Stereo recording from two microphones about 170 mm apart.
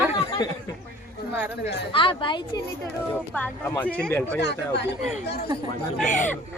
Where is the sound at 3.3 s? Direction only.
10° left (ahead or behind).